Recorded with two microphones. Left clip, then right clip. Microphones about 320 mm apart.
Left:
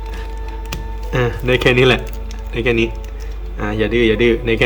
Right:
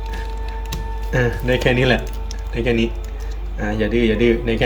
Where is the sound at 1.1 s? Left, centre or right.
Centre.